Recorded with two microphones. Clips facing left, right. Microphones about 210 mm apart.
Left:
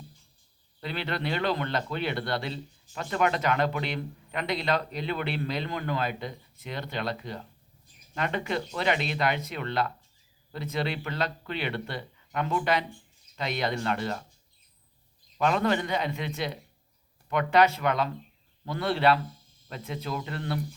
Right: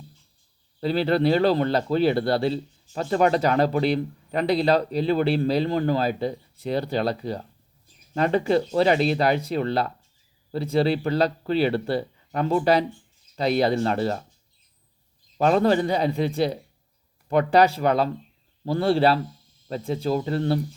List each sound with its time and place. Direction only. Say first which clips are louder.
0.8 s a man's voice: right 11 dB; 35° right (ahead or behind)
15.4 s a man's voice: right 6 dB; 35° right (ahead or behind)